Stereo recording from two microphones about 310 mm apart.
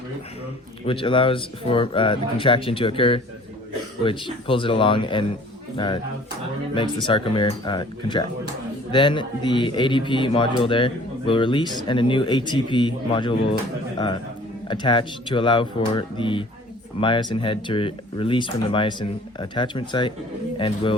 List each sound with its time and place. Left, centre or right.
0.9 s speech: centre
14.7 s speech: centre